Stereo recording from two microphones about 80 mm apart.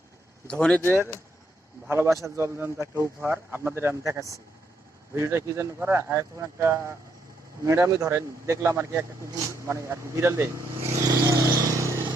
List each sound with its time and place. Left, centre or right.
0.4 s speech: centre
1.9 s speech: right
11.0 s vehicle: right